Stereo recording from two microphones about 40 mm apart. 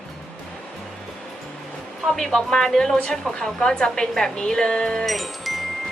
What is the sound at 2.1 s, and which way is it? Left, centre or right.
Speech, centre.